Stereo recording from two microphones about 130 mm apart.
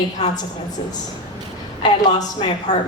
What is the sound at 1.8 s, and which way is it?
Speech, 35° left (ahead or behind).